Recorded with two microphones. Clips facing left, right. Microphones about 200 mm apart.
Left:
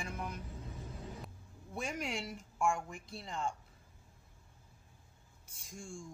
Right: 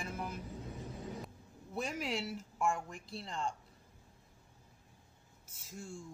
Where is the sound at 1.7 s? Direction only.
Centre (ahead or behind).